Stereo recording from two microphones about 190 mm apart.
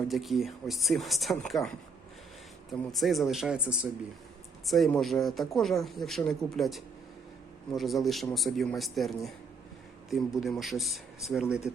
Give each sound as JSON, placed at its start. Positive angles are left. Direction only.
{"t": 0.1, "sound": "speech", "side_deg": 0}